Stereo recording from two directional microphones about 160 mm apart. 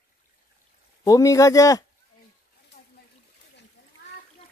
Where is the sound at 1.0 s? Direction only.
20° left (ahead or behind).